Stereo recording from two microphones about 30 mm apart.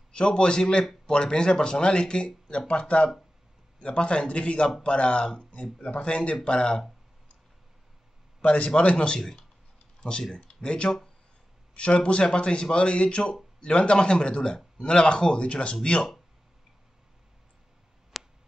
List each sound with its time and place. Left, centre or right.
0.1 s speech: left
8.4 s speech: left
9.9 s a sound: left
10.5 s speech: left
15.4 s speech: left
18.1 s a sound: centre